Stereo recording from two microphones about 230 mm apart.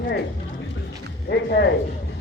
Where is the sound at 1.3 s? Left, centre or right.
Left.